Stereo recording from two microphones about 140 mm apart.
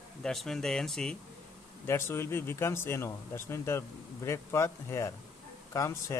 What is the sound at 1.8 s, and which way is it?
Speech, 15° left (ahead or behind).